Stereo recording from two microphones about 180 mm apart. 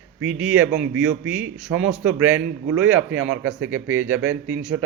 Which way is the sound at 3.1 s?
90° right.